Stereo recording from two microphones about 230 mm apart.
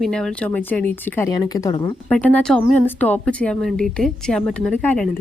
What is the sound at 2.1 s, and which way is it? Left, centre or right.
A woman's voice, centre.